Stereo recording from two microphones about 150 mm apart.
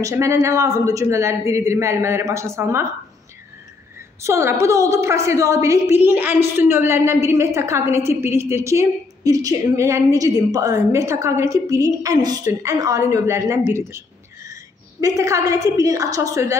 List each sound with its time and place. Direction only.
0.0 s a woman's voice: 20° right (ahead or behind)
4.2 s a woman's voice: 20° right (ahead or behind)